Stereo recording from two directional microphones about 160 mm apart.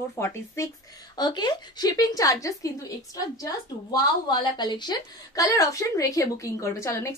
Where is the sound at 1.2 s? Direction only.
25° left (ahead or behind).